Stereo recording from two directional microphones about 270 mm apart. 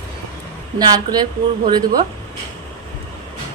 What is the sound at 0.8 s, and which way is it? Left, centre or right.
A woman's voice, centre.